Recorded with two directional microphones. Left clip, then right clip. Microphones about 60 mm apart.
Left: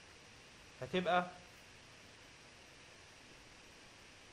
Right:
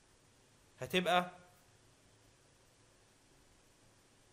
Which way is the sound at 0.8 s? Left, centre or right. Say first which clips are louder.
Right 2 dB; right.